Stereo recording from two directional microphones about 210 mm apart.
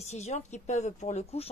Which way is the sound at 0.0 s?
30° left (ahead or behind).